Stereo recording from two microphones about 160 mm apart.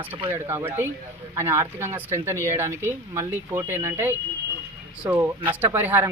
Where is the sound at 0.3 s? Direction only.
15° right (ahead or behind).